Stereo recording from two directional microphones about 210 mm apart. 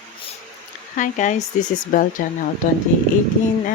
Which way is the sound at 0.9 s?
35° left (ahead or behind).